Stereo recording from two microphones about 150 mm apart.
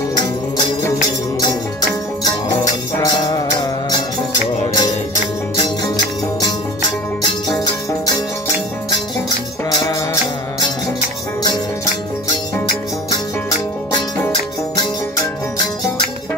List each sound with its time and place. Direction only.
1.0 s music: 25° left (ahead or behind)
7.4 s music: 25° left (ahead or behind)